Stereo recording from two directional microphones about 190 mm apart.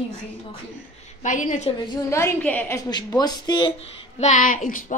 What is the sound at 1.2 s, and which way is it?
Speech, 40° left (ahead or behind).